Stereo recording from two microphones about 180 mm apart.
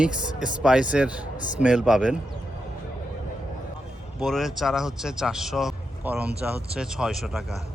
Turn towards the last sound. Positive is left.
turn(degrees=0)  # may be behind; listen again after turning